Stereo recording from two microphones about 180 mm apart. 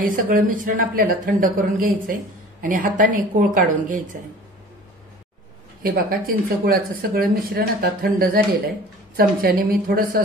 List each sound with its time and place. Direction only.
0.0 s speech: 50° right (ahead or behind)
5.8 s speech: 55° right (ahead or behind)